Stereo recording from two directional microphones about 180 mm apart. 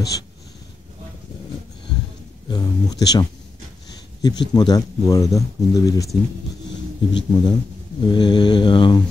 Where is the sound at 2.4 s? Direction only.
25° left (ahead or behind).